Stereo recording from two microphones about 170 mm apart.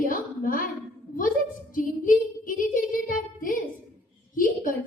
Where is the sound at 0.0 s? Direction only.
55° left (ahead or behind).